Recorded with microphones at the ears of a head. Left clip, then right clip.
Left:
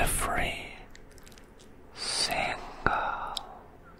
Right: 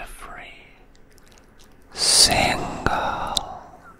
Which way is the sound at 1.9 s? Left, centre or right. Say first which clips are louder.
Right 13 dB; right.